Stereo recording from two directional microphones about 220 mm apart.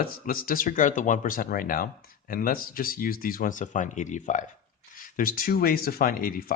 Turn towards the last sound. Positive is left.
turn(degrees=40)  # may be behind; listen again after turning